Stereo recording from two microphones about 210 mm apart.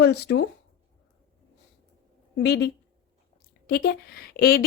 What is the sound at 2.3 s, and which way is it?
Speech, 50° left (ahead or behind).